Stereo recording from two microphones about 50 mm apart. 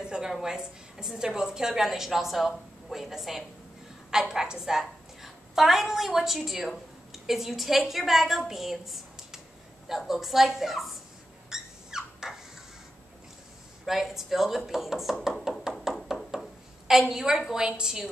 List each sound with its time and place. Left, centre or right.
0.0 s a sound: centre
0.3 s a woman's voice: centre
11.5 s dog: centre
13.8 s a woman's voice: centre
15.5 s a sound: centre
17.1 s a woman's voice: centre